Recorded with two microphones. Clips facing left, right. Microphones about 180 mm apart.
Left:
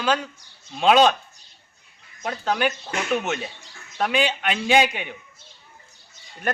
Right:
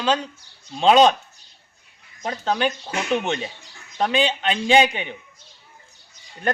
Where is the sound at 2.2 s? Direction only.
30° right (ahead or behind).